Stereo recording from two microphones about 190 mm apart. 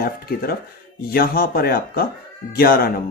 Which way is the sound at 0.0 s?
55° left (ahead or behind).